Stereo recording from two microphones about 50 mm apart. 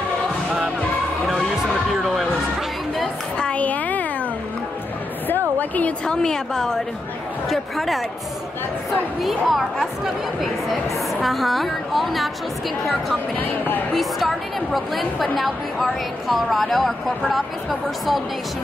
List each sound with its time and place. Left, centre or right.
1.6 s music: centre
3.3 s a sound: left
5.6 s a sound: left
6.0 s a woman's voice: centre
9.2 s speech: centre
13.4 s speech: left
13.9 s speech: centre